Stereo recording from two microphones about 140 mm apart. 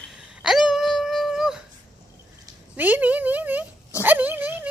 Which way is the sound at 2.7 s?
10° right (ahead or behind).